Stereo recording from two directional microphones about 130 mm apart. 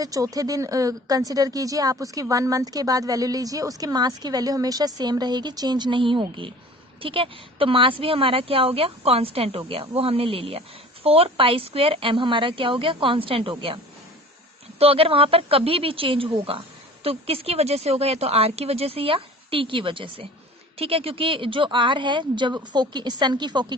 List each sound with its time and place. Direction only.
0.0 s a woman's voice: 25° right (ahead or behind); by 13.7 s 45° right (ahead or behind)
14.8 s a woman's voice: 45° right (ahead or behind)